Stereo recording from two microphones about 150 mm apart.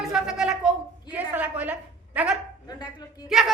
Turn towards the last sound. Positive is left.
turn(degrees=0)  # may be behind; listen again after turning